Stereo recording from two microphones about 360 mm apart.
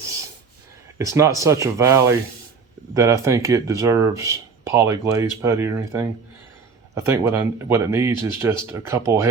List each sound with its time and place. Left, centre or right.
0.9 s speech: centre